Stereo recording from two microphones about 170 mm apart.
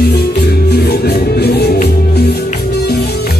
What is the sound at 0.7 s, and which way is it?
Music, 70° left (ahead or behind).